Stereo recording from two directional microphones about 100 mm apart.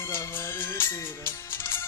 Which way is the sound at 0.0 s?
25° left (ahead or behind).